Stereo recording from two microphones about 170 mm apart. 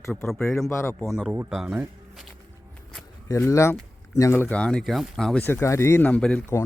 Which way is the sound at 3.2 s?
20° left (ahead or behind).